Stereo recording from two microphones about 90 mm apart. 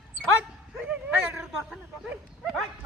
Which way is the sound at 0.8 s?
15° right (ahead or behind).